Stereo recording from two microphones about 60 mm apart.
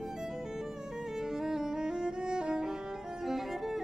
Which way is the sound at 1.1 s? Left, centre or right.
Centre.